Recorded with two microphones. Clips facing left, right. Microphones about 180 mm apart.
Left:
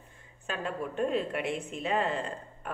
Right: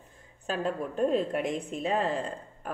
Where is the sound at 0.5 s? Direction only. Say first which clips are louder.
Right 4 dB; 40° right (ahead or behind).